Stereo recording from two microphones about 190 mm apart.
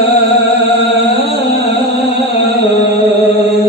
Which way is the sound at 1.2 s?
60° right (ahead or behind).